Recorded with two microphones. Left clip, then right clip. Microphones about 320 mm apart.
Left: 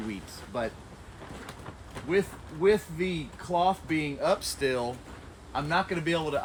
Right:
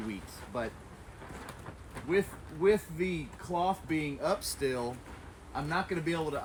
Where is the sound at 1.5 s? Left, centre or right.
Centre.